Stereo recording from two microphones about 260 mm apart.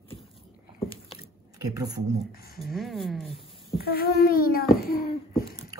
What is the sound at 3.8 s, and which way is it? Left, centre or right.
A child's voice, left.